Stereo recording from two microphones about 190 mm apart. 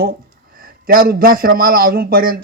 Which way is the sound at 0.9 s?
50° right (ahead or behind).